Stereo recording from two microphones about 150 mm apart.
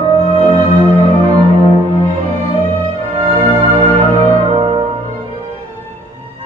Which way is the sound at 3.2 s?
40° right (ahead or behind).